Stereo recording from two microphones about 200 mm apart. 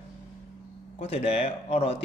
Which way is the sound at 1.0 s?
30° left (ahead or behind).